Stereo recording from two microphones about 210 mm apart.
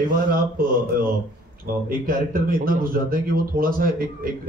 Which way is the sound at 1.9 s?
40° right (ahead or behind).